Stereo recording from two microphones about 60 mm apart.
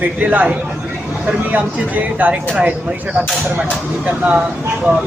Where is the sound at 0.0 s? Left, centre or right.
Right.